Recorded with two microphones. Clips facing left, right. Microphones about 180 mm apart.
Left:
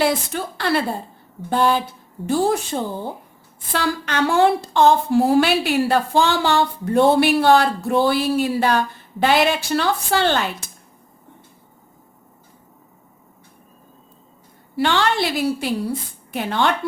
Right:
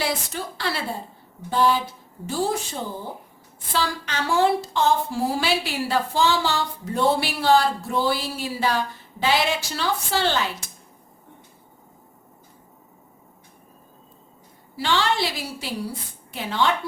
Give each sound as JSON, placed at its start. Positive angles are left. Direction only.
{"t": 0.5, "sound": "a woman's voice", "side_deg": 55}
{"t": 14.8, "sound": "a woman's voice", "side_deg": 60}